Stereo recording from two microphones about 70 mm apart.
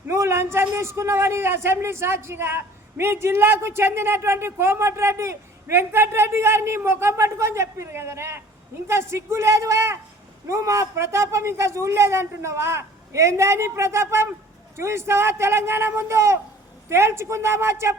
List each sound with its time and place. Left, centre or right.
0.1 s a man's voice: right